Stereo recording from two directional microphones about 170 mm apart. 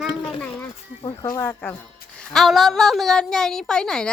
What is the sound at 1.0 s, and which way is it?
Speech, 20° left (ahead or behind).